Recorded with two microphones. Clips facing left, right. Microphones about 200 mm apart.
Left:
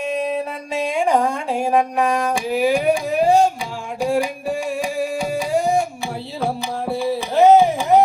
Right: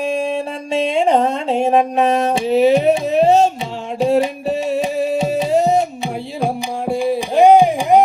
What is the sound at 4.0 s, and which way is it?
Music, 25° right (ahead or behind).